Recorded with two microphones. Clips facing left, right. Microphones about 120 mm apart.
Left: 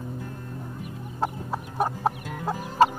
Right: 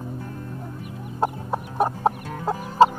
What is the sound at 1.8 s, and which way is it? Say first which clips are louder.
Chicken: right 4 dB; 25° right (ahead or behind).